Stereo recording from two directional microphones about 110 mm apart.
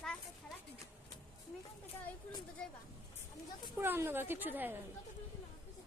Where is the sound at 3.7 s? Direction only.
20° right (ahead or behind).